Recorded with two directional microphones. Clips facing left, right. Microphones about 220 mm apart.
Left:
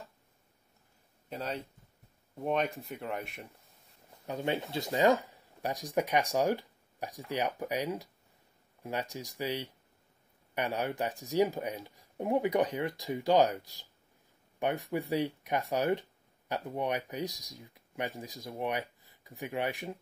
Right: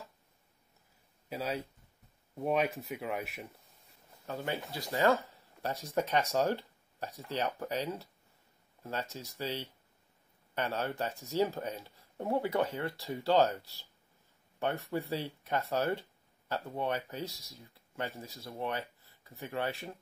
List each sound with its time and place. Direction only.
1.3 s speech: 5° right (ahead or behind)
4.3 s speech: 20° left (ahead or behind)